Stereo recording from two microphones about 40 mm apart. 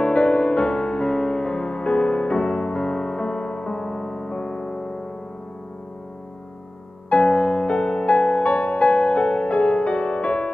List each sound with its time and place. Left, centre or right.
0.0 s music: left; by 5.0 s centre
7.1 s music: left
8.0 s music: left